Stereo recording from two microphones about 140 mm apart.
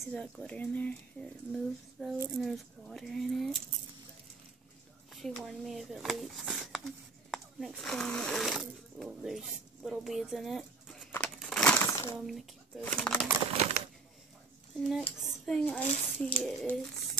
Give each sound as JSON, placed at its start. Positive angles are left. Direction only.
{"t": 0.1, "sound": "speech", "side_deg": 10}
{"t": 1.5, "sound": "speech", "side_deg": 0}
{"t": 5.2, "sound": "speech", "side_deg": 5}
{"t": 11.1, "sound": "a sound", "side_deg": 10}
{"t": 11.3, "sound": "crumpling", "side_deg": 0}
{"t": 11.8, "sound": "a sound", "side_deg": 20}
{"t": 12.3, "sound": "a child's voice", "side_deg": 0}
{"t": 13.6, "sound": "a sound", "side_deg": -50}
{"t": 14.8, "sound": "speech", "side_deg": 0}